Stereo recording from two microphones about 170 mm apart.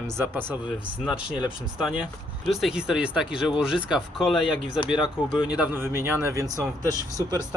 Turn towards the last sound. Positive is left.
turn(degrees=-20)  # may be behind; listen again after turning